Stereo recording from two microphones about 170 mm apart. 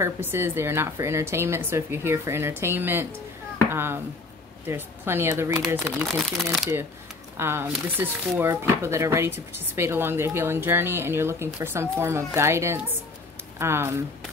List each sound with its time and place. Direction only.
0.0 s speech: 15° right (ahead or behind)
6.0 s speech: centre (ahead or behind)
7.3 s speech: 15° right (ahead or behind)